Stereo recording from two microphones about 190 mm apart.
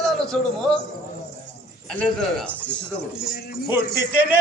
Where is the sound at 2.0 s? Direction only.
Centre (ahead or behind).